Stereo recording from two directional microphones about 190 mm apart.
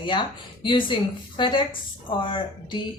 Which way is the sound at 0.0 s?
25° left (ahead or behind).